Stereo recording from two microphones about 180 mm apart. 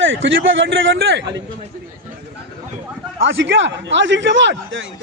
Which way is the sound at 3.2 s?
90° right.